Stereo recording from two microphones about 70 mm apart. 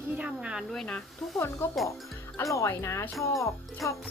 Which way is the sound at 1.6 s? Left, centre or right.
Left.